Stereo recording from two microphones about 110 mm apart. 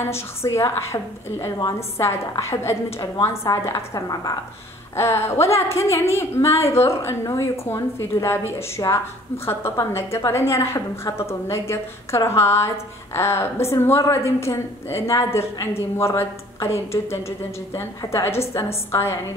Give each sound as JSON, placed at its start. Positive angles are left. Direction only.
{"t": 0.0, "sound": "a woman's voice", "side_deg": 25}